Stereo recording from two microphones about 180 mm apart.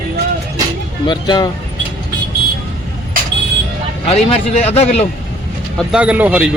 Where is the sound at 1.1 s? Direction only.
25° left (ahead or behind).